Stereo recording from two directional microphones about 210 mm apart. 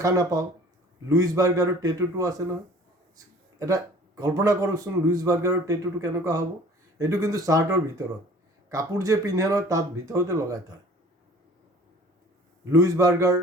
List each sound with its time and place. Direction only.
0.0 s a man's voice: 15° right (ahead or behind)
3.6 s a man's voice: 15° right (ahead or behind)
12.7 s a man's voice: 15° right (ahead or behind)